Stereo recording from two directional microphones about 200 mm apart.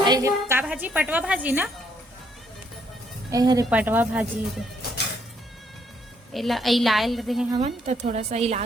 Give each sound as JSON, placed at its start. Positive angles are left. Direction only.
{"t": 0.0, "sound": "a woman's voice", "side_deg": -20}
{"t": 3.3, "sound": "a woman's voice", "side_deg": -20}
{"t": 6.3, "sound": "a woman's voice", "side_deg": 0}
{"t": 7.5, "sound": "a woman's voice", "side_deg": -30}